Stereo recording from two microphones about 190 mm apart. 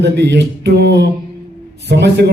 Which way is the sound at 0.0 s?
65° right (ahead or behind).